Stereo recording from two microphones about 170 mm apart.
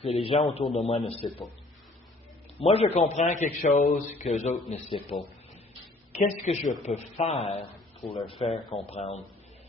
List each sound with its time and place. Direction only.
0.0 s speech: 35° left (ahead or behind)
2.6 s a man's voice: 35° left (ahead or behind)
6.1 s speech: 40° left (ahead or behind)